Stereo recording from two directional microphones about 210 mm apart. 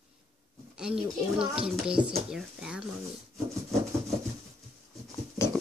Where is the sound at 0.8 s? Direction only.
5° right (ahead or behind).